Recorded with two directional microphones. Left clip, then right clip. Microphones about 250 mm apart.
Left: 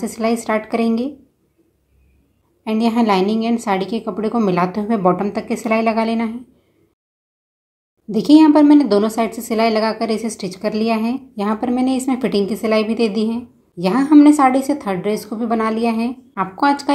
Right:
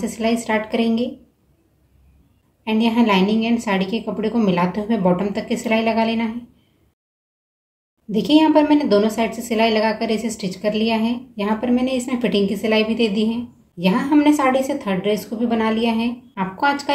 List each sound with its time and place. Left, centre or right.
0.0 s a woman's voice: left
2.6 s a woman's voice: left
8.1 s a woman's voice: left